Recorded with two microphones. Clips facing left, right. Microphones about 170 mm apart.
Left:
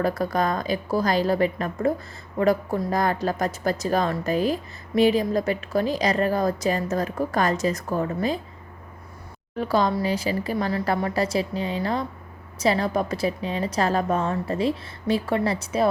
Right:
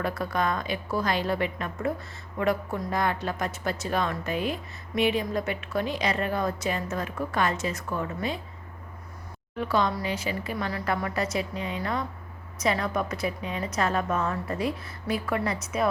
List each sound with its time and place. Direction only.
0.0 s a woman's voice: 40° left (ahead or behind)
9.6 s a woman's voice: 35° left (ahead or behind)